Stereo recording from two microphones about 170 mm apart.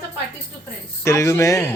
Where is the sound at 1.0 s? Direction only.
15° left (ahead or behind).